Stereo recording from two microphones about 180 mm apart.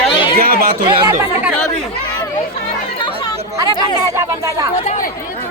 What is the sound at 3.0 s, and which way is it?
Chatter, 20° left (ahead or behind).